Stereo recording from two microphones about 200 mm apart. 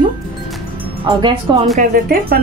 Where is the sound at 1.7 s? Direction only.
45° right (ahead or behind).